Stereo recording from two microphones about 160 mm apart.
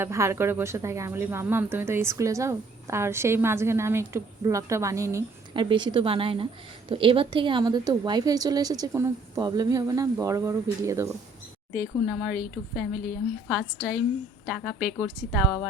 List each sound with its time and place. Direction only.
0.0 s speech: 15° right (ahead or behind)
5.5 s a woman's voice: 30° right (ahead or behind); by 12.4 s 5° right (ahead or behind)
13.5 s a woman's voice: 5° right (ahead or behind)